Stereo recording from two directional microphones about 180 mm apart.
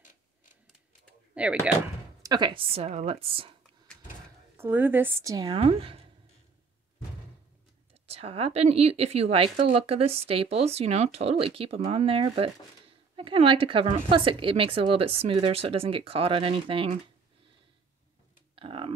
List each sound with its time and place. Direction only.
1.3 s speech: 5° right (ahead or behind)
2.2 s a woman's voice: 25° right (ahead or behind)
4.6 s a woman's voice: 10° right (ahead or behind); by 6.0 s 30° right (ahead or behind)
8.1 s a woman's voice: 35° right (ahead or behind)
18.5 s computer keyboard: 30° right (ahead or behind)